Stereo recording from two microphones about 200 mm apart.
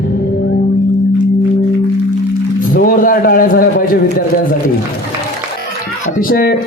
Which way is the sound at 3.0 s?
45° left (ahead or behind).